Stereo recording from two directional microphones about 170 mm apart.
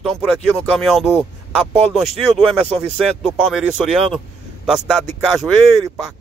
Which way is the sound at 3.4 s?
5° right (ahead or behind).